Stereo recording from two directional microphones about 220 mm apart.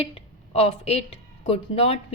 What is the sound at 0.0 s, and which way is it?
A woman's voice, 25° left (ahead or behind).